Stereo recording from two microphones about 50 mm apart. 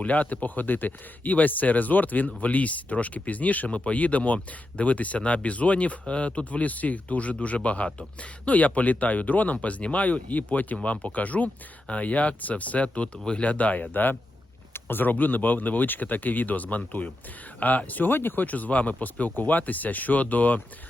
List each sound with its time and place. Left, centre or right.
0.0 s speech: left